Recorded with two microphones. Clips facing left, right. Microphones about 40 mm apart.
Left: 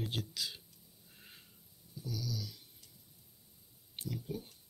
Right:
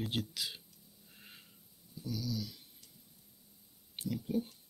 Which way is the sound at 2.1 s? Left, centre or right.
Right.